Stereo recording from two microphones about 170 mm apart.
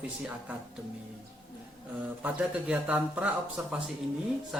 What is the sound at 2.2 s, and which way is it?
Speech, 10° right (ahead or behind).